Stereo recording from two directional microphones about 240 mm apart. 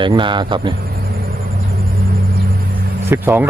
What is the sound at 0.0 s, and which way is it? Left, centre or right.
Speech, centre.